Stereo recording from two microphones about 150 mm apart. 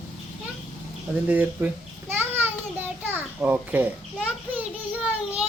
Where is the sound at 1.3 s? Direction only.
10° right (ahead or behind).